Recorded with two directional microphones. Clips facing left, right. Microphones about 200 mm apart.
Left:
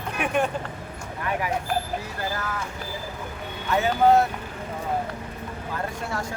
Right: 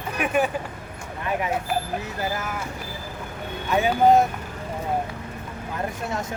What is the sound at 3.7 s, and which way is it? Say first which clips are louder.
Speech: right 1 dB; 15° right (ahead or behind).